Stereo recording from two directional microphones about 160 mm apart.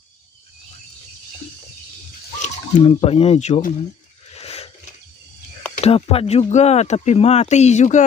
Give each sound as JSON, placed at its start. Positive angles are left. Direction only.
{"t": 2.4, "sound": "speech", "side_deg": 35}
{"t": 4.3, "sound": "a sound", "side_deg": 40}
{"t": 5.8, "sound": "speech", "side_deg": 40}